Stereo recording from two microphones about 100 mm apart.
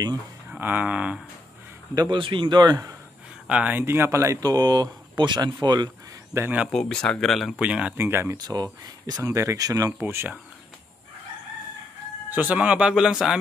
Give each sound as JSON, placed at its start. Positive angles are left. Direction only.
{"t": 0.5, "sound": "speech", "side_deg": -15}
{"t": 2.0, "sound": "a man's voice", "side_deg": -50}
{"t": 3.4, "sound": "speech", "side_deg": -10}
{"t": 3.8, "sound": "a man's voice", "side_deg": -25}
{"t": 6.3, "sound": "speech", "side_deg": -30}
{"t": 6.7, "sound": "speech", "side_deg": 5}
{"t": 7.6, "sound": "speech", "side_deg": -10}
{"t": 8.0, "sound": "speech", "side_deg": -25}
{"t": 9.9, "sound": "speech", "side_deg": -20}
{"t": 12.3, "sound": "speech", "side_deg": -15}